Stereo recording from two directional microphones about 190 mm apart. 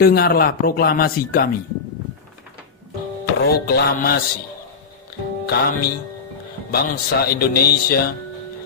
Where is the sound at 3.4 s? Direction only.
55° left (ahead or behind).